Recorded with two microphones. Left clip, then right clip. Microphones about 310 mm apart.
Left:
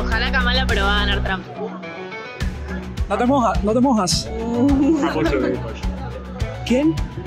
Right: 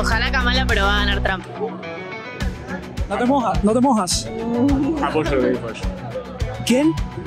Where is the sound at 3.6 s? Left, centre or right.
Right.